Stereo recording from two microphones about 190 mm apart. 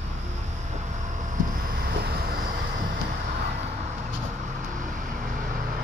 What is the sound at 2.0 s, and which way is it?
Vehicle, 55° right (ahead or behind).